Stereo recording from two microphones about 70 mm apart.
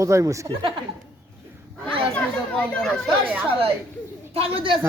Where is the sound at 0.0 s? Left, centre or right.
Right.